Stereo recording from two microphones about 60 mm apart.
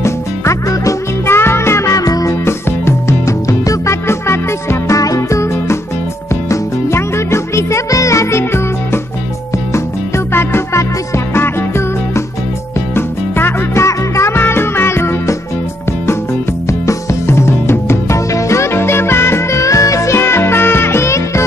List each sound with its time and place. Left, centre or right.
0.0 s music: left
1.3 s music: left
2.0 s music: left
2.4 s music: left
4.9 s music: left
12.9 s music: left
13.8 s music: left
14.4 s music: left
16.6 s music: left